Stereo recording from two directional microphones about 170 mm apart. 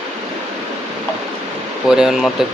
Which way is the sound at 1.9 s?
5° right (ahead or behind).